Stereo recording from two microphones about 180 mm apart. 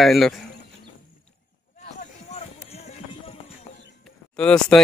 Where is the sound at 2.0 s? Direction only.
35° left (ahead or behind).